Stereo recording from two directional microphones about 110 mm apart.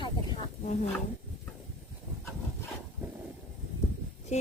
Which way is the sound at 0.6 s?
90° left.